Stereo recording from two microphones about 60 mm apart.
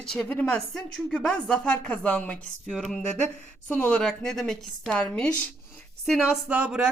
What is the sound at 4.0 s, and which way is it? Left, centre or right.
Speech, centre.